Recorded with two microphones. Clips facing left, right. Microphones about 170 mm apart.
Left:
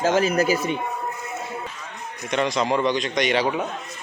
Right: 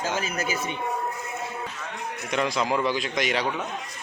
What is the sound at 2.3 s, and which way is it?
A man's voice, centre (ahead or behind).